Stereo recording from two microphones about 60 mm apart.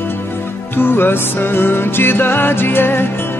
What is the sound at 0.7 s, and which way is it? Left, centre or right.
Music, left.